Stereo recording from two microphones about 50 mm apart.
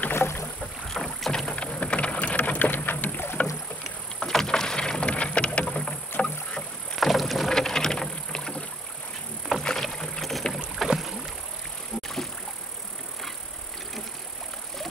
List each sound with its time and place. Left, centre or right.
0.1 s rowboat: left
0.9 s rowboat: centre
1.5 s vehicle: left
4.2 s vehicle: centre
7.0 s rowboat: centre
10.8 s rowboat: centre